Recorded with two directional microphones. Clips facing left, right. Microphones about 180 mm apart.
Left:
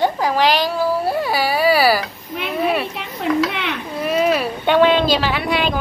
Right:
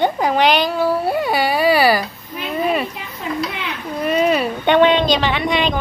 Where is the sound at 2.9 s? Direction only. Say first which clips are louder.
Left 5 dB; 75° left (ahead or behind).